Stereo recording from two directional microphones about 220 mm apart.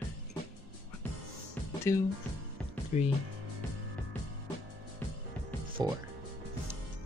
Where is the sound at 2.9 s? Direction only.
30° left (ahead or behind).